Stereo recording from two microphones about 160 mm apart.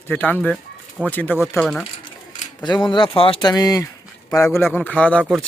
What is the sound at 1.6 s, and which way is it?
Speech, centre (ahead or behind).